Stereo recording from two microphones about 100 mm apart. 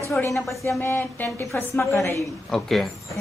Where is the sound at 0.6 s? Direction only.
30° left (ahead or behind).